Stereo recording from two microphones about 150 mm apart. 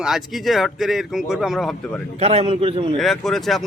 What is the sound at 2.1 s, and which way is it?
Speech, 45° right (ahead or behind).